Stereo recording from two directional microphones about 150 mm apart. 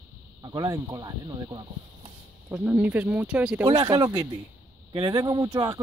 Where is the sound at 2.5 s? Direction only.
10° right (ahead or behind).